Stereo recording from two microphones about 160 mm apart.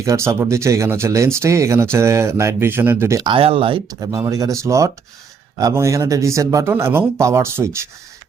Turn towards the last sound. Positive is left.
turn(degrees=-15)  # may be behind; listen again after turning